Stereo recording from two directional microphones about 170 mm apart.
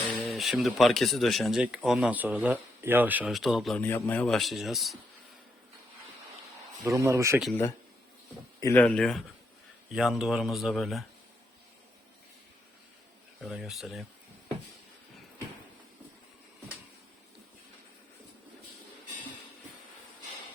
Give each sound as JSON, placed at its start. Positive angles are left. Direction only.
{"t": 0.3, "sound": "speech", "side_deg": 0}
{"t": 3.8, "sound": "speech", "side_deg": 10}
{"t": 6.8, "sound": "speech", "side_deg": -20}
{"t": 8.6, "sound": "speech", "side_deg": 10}
{"t": 13.4, "sound": "speech", "side_deg": 0}